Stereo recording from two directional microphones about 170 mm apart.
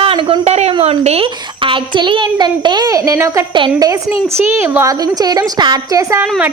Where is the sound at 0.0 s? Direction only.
30° right (ahead or behind).